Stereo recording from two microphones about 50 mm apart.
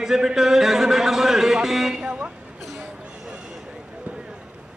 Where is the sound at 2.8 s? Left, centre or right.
Centre.